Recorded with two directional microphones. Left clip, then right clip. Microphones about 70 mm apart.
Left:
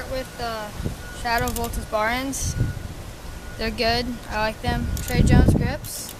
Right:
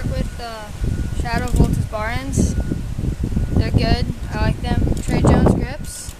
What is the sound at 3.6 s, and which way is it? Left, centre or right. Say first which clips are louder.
Speech: left 1 dB; centre.